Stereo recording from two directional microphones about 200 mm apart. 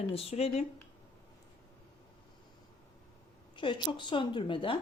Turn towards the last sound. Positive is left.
turn(degrees=25)  # may be behind; listen again after turning